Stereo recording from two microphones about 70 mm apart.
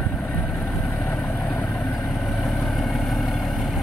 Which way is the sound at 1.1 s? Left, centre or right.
Centre.